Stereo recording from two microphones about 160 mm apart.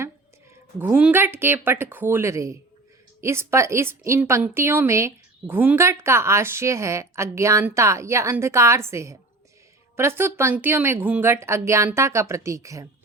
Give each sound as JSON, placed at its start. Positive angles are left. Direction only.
{"t": 0.8, "sound": "a woman's voice", "side_deg": -10}